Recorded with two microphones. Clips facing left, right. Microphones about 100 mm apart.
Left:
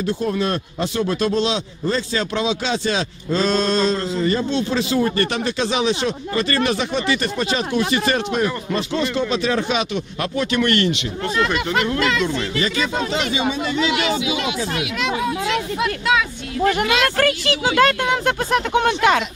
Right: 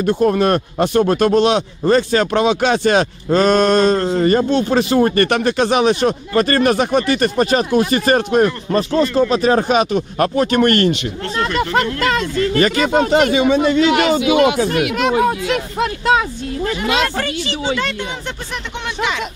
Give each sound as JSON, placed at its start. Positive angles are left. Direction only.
{"t": 0.0, "sound": "speech", "side_deg": -55}
{"t": 12.5, "sound": "speech", "side_deg": -55}
{"t": 17.2, "sound": "speech", "side_deg": 60}